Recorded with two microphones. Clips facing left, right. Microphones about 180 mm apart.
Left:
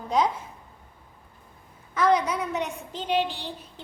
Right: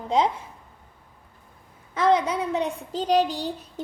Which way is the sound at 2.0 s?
25° right (ahead or behind).